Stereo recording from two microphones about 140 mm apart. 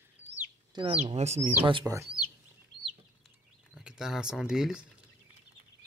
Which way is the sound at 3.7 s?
5° right (ahead or behind).